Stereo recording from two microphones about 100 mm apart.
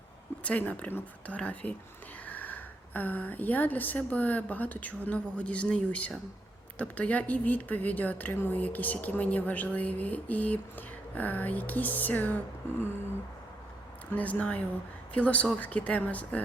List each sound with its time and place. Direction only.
0.4 s a woman's voice: 15° left (ahead or behind)
14.1 s a woman's voice: 15° left (ahead or behind)